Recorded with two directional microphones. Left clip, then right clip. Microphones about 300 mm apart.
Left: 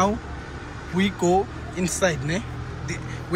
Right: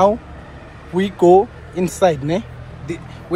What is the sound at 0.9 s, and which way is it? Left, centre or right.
A man's voice, centre.